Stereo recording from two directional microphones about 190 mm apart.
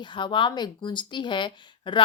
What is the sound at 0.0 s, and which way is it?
Speech, 25° left (ahead or behind).